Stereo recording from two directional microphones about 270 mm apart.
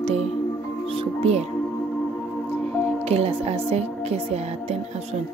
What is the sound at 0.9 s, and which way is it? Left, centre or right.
Music, right.